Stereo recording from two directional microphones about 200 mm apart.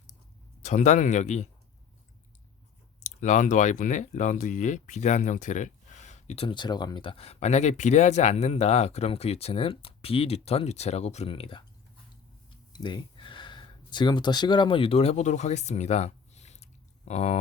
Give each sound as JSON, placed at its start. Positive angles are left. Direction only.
{"t": 0.6, "sound": "speech", "side_deg": 35}
{"t": 3.0, "sound": "speech", "side_deg": 35}
{"t": 12.7, "sound": "speech", "side_deg": 20}